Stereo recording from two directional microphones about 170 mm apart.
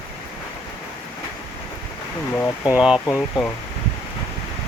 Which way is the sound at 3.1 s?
15° left (ahead or behind).